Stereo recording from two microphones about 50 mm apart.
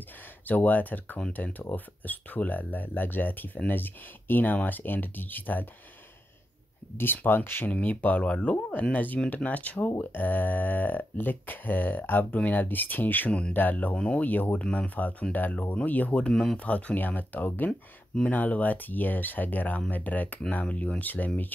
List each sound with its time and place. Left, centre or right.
0.5 s speech: left
7.0 s speech: left
7.7 s speech: left
8.9 s speech: left
13.9 s speech: left
14.2 s speech: left
16.2 s speech: centre; by 21.3 s left